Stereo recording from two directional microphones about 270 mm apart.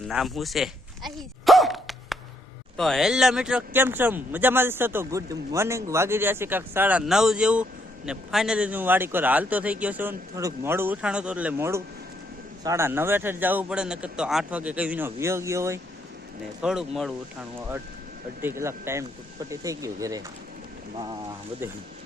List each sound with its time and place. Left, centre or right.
0.1 s a sound: centre
2.7 s speech: centre
18.4 s speech: centre